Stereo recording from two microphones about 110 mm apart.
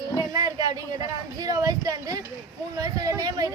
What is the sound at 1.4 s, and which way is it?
Speech, 35° right (ahead or behind).